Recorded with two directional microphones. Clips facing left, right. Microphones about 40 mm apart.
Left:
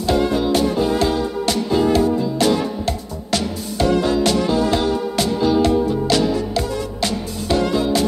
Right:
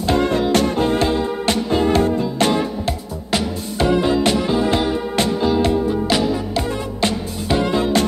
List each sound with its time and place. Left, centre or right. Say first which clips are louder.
0.0 s music: even; right
3.3 s music: right 1 dB; right